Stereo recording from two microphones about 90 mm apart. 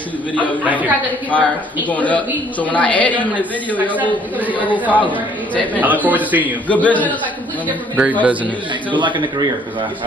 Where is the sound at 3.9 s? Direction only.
20° right (ahead or behind).